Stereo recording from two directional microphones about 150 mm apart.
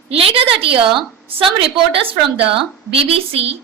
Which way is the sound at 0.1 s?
40° right (ahead or behind).